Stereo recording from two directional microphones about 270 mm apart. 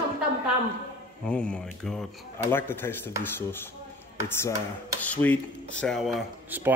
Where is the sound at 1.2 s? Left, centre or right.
Centre.